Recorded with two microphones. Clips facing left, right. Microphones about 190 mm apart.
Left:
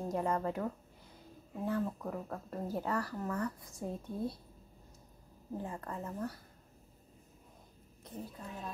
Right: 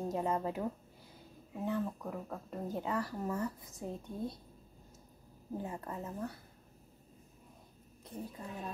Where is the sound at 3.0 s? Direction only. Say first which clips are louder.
Even; 25° right (ahead or behind).